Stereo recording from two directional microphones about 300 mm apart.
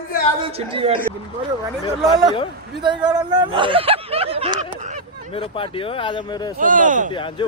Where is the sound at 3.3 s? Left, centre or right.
Centre.